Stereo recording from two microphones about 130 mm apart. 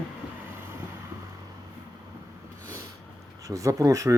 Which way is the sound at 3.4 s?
25° right (ahead or behind).